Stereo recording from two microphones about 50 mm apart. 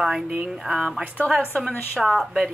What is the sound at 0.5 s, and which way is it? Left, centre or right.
Speech, centre.